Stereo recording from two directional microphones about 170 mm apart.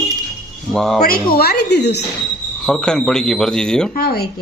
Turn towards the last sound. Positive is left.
turn(degrees=65)  # may be behind; listen again after turning